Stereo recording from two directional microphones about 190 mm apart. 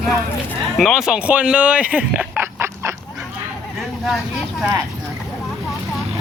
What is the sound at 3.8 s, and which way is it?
Vehicle, centre (ahead or behind).